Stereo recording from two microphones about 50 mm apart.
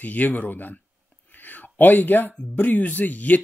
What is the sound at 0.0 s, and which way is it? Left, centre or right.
Speech, left.